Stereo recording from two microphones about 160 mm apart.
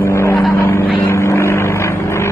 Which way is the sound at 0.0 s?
15° left (ahead or behind).